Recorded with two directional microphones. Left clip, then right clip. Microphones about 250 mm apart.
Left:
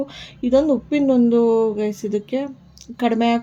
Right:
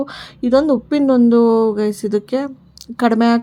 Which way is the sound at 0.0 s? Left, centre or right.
Right.